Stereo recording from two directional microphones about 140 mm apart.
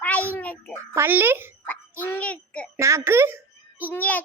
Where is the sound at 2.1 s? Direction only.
10° left (ahead or behind).